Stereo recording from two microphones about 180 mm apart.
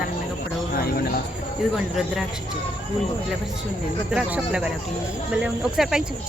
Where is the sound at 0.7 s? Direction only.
55° left (ahead or behind).